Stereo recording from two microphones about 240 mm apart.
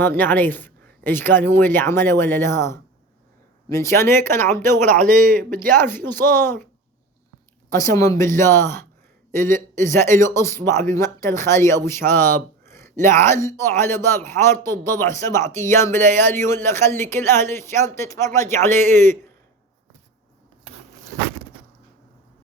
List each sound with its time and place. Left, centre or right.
0.0 s a man's voice: centre
4.9 s a man's voice: right
5.7 s a man's voice: centre
7.7 s a man's voice: centre